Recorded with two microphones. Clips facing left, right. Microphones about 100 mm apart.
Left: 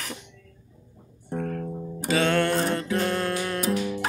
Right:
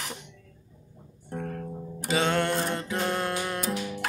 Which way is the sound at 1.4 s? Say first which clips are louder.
Left 4 dB; 10° right (ahead or behind).